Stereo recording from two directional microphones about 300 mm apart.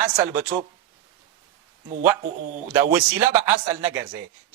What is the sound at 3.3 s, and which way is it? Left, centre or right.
Speech, centre.